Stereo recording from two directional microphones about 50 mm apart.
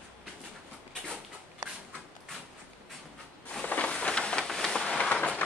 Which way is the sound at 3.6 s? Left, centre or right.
Left.